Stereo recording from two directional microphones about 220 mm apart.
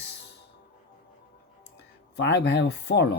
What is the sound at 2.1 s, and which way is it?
Speech, 50° left (ahead or behind).